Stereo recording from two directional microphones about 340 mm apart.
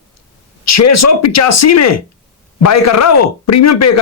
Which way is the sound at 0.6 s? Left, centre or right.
Left.